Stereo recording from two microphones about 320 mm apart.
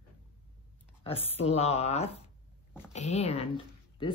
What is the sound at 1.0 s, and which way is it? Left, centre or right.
Speech, centre.